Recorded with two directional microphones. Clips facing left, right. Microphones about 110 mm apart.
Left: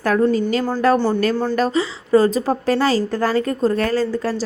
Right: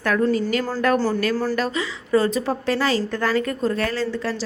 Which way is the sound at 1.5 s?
35° left (ahead or behind).